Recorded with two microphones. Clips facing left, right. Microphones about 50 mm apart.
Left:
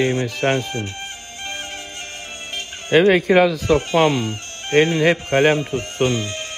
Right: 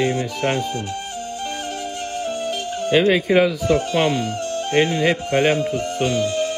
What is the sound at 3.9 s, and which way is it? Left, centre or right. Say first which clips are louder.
Speech: left 2 dB; left.